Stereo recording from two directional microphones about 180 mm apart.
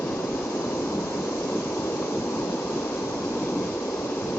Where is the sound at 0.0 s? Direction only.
10° left (ahead or behind).